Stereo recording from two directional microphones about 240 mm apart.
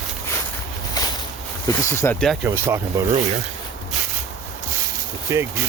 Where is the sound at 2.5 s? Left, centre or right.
Centre.